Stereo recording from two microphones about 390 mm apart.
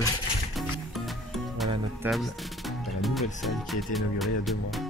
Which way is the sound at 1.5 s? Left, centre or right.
Centre.